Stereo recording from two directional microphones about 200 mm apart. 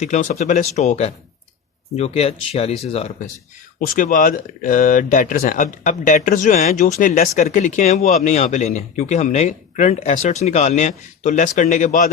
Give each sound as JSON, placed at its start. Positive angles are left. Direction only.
{"t": 0.0, "sound": "speech", "side_deg": 35}
{"t": 3.8, "sound": "speech", "side_deg": 45}